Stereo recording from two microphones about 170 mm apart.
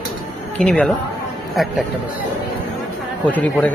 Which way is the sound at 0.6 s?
5° left (ahead or behind).